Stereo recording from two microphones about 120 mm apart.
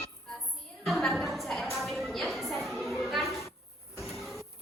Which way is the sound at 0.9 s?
Centre (ahead or behind).